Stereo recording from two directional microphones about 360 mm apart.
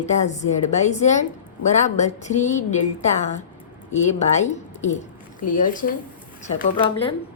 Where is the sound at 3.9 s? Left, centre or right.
Centre.